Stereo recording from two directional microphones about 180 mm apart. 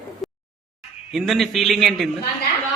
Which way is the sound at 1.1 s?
Centre (ahead or behind).